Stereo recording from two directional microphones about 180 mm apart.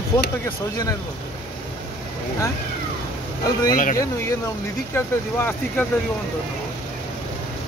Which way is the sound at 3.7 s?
50° left (ahead or behind).